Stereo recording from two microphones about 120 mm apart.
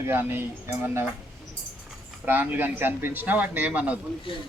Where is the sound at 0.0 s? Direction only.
20° right (ahead or behind).